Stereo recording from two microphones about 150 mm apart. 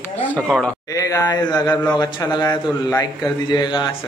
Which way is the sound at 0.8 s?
25° left (ahead or behind).